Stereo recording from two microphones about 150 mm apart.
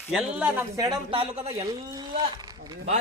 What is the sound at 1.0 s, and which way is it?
Speech, 35° right (ahead or behind).